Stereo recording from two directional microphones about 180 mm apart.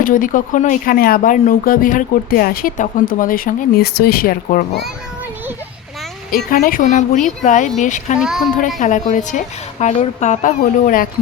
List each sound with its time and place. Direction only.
0.0 s speech: 50° left (ahead or behind)
6.3 s speech: 50° left (ahead or behind)
8.2 s a woman's voice: 5° right (ahead or behind)
8.6 s speech: 45° left (ahead or behind)